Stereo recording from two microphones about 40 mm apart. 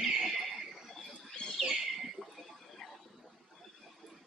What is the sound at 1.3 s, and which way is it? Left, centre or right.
Bird, centre.